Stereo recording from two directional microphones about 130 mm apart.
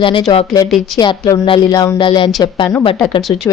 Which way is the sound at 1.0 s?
30° left (ahead or behind).